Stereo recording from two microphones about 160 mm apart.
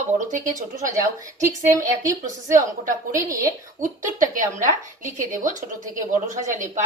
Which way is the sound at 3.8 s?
55° right (ahead or behind).